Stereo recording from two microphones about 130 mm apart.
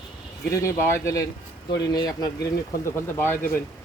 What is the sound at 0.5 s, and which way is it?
Speech, 20° left (ahead or behind).